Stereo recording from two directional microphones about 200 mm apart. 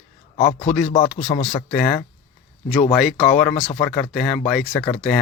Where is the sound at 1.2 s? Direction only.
25° left (ahead or behind).